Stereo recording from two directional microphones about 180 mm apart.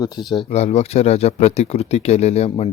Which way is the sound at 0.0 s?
20° left (ahead or behind).